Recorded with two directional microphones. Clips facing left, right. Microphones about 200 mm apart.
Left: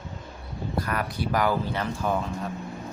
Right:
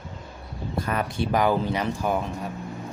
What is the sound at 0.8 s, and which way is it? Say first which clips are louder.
Speech: right 3 dB; 25° right (ahead or behind).